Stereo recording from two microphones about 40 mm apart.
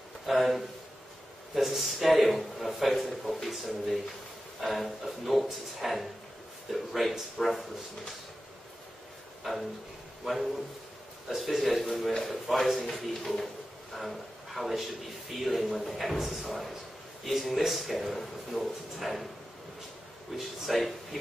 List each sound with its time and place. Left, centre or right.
0.3 s a man's voice: centre
9.4 s a man's voice: centre
20.3 s a man's voice: centre